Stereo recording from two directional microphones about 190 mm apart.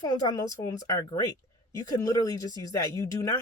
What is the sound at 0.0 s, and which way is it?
Speech, 20° left (ahead or behind).